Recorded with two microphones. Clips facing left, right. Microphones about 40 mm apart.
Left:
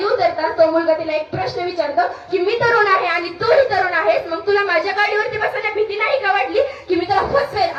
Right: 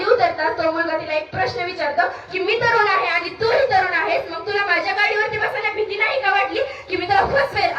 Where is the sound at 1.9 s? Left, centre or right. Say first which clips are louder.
Left 3 dB; right.